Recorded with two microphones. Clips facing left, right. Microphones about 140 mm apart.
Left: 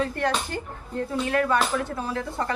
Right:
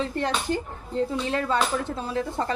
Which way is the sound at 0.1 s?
20° right (ahead or behind).